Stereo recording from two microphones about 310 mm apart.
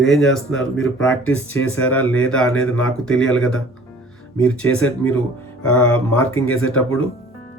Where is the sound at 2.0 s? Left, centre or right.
Left.